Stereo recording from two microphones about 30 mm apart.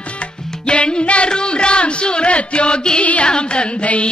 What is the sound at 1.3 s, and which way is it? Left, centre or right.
Music, left.